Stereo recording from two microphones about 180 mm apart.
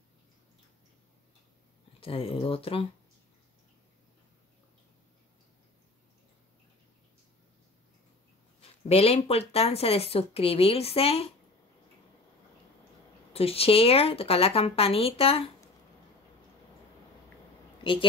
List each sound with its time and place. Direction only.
2.0 s speech: 30° left (ahead or behind)
8.5 s speech: 35° left (ahead or behind)
13.3 s speech: 35° left (ahead or behind)